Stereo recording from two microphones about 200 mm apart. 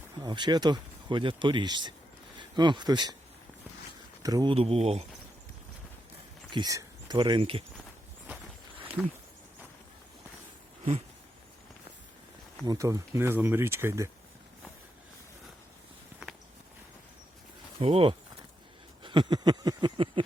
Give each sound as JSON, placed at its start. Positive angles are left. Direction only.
{"t": 0.2, "sound": "speech", "side_deg": -20}
{"t": 4.2, "sound": "speech", "side_deg": -20}
{"t": 4.5, "sound": "speech", "side_deg": -30}
{"t": 6.5, "sound": "speech", "side_deg": -20}
{"t": 9.0, "sound": "a sound", "side_deg": 0}
{"t": 12.6, "sound": "speech", "side_deg": -15}
{"t": 17.7, "sound": "speech", "side_deg": -25}